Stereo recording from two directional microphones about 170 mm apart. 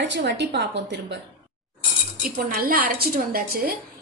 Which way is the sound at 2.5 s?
60° right (ahead or behind).